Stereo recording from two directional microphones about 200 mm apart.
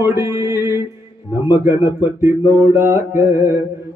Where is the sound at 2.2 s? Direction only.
15° right (ahead or behind).